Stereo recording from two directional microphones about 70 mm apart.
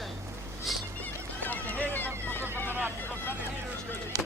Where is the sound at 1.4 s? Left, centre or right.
Left.